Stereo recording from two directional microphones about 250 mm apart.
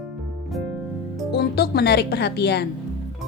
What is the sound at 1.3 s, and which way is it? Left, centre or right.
Speech, left.